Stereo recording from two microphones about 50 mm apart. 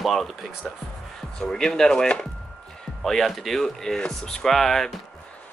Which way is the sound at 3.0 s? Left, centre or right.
Centre.